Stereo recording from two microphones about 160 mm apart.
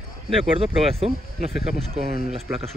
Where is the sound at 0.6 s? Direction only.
40° right (ahead or behind).